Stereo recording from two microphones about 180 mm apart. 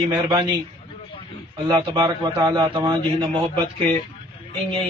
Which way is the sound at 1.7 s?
25° right (ahead or behind).